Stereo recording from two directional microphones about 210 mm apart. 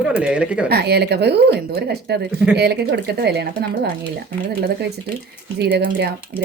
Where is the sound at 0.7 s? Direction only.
50° right (ahead or behind).